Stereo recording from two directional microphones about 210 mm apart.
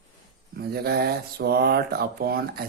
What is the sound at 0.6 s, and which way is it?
Speech, 50° right (ahead or behind).